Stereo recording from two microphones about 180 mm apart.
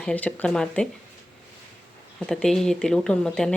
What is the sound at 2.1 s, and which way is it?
Speech, 5° left (ahead or behind).